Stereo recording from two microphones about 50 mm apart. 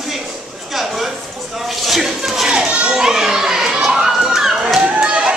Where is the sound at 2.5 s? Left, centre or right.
Centre.